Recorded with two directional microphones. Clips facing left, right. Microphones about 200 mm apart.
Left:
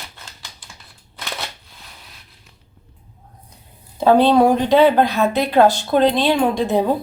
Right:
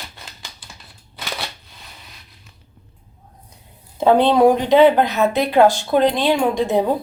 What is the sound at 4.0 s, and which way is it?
Speech, 20° right (ahead or behind).